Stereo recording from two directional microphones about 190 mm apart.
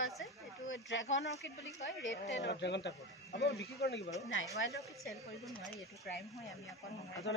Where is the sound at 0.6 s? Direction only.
85° left.